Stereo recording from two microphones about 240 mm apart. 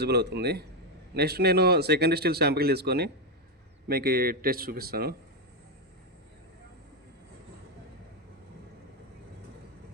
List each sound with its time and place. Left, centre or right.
0.0 s a man's voice: right